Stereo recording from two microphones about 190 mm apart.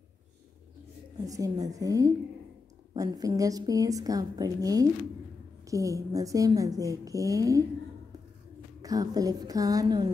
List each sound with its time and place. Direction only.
1.1 s a woman's voice: 20° right (ahead or behind)
8.8 s a woman's voice: 20° right (ahead or behind)